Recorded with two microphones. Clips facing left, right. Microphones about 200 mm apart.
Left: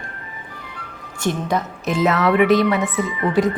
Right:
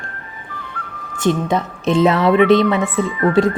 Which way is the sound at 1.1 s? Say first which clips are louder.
Right 4 dB; 25° right (ahead or behind).